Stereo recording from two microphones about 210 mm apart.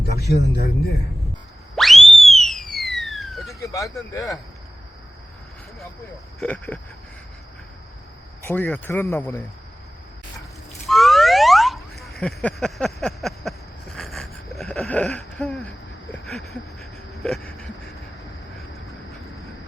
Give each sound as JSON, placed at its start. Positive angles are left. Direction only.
{"t": 0.2, "sound": "a man's voice", "side_deg": 50}
{"t": 1.7, "sound": "a sound", "side_deg": 0}
{"t": 3.6, "sound": "speech", "side_deg": 15}
{"t": 6.4, "sound": "speech", "side_deg": 5}
{"t": 8.4, "sound": "speech", "side_deg": 10}
{"t": 10.8, "sound": "boing", "side_deg": 0}
{"t": 16.2, "sound": "a sound", "side_deg": 0}